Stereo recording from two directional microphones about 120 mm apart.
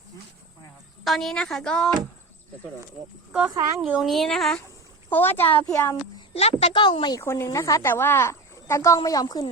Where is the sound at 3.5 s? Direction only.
30° right (ahead or behind).